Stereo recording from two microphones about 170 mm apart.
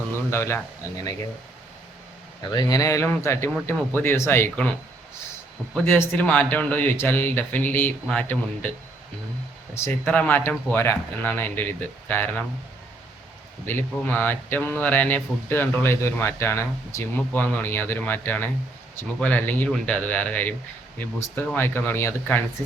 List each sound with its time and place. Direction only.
0.3 s speech: 15° left (ahead or behind)
2.5 s speech: 20° left (ahead or behind)
5.8 s speech: 15° left (ahead or behind)
9.7 s speech: 10° left (ahead or behind)
13.7 s speech: 10° left (ahead or behind)